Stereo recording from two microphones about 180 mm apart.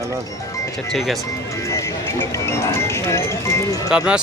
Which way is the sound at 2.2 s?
15° left (ahead or behind).